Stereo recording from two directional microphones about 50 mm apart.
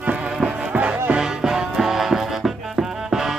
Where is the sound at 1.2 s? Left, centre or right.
Centre.